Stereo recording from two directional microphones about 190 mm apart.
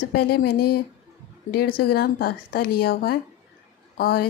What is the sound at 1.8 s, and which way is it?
A woman's voice, 55° left (ahead or behind).